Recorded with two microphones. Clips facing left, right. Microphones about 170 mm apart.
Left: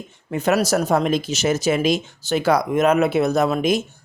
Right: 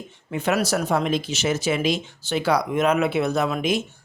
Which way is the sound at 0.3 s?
40° left (ahead or behind).